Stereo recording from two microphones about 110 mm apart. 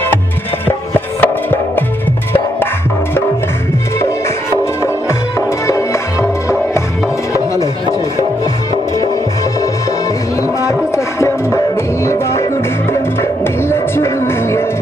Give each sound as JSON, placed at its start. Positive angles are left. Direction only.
{"t": 0.7, "sound": "music", "side_deg": 20}
{"t": 10.7, "sound": "music", "side_deg": 25}